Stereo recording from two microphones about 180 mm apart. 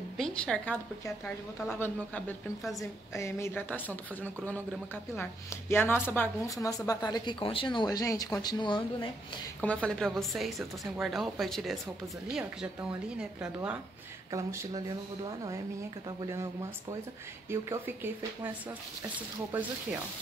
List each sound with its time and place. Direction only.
0.2 s a woman's voice: 5° left (ahead or behind)
2.8 s a woman's voice: 15° left (ahead or behind)
9.6 s speech: 5° left (ahead or behind)
13.2 s speech: 5° right (ahead or behind)
16.2 s speech: 15° right (ahead or behind)
17.5 s speech: 15° right (ahead or behind)
19.5 s speech: 10° right (ahead or behind)